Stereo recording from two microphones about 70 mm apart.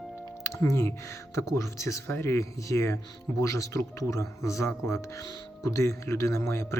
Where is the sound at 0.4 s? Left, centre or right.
Left.